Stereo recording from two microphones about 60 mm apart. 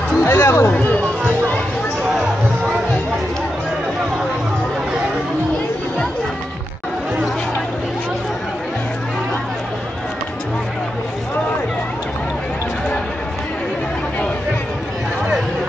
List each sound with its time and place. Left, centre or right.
0.2 s speech: left